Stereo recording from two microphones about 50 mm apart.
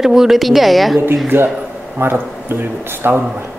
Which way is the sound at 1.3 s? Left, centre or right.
Right.